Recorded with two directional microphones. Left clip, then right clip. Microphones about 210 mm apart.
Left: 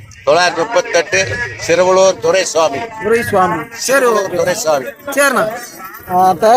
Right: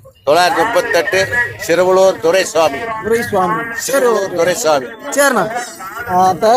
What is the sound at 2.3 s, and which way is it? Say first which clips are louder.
Speech: even; 20° right (ahead or behind).